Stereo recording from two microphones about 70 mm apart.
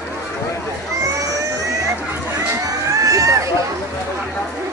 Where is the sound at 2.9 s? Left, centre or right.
Right.